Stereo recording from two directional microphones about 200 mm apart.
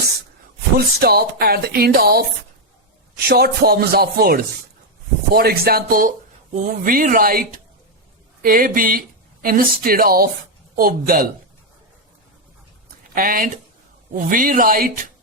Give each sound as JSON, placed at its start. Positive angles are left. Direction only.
{"t": 0.9, "sound": "speech", "side_deg": -50}
{"t": 3.2, "sound": "speech", "side_deg": -50}
{"t": 13.1, "sound": "speech", "side_deg": -45}